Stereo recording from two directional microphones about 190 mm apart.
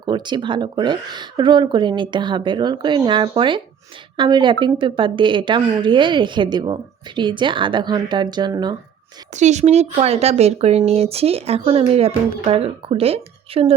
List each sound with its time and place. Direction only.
0.0 s speech: 25° right (ahead or behind)
9.3 s speech: 40° right (ahead or behind)